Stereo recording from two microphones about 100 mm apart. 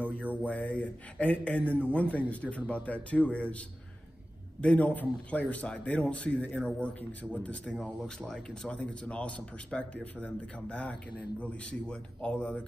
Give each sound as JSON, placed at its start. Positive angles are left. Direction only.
{"t": 0.0, "sound": "speech", "side_deg": -15}
{"t": 0.4, "sound": "speech", "side_deg": 15}
{"t": 1.6, "sound": "a man's voice", "side_deg": -20}
{"t": 2.0, "sound": "speech", "side_deg": 15}